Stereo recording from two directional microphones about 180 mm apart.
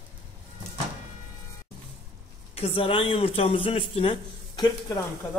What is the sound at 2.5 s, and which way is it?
Speech, 30° left (ahead or behind).